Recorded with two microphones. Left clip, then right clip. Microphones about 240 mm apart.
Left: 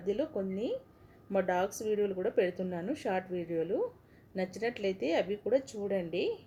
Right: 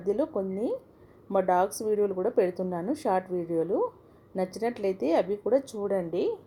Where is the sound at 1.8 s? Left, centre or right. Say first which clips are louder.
Right 5 dB; centre.